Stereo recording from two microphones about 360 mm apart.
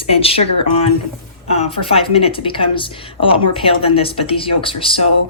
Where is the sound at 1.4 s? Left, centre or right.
Centre.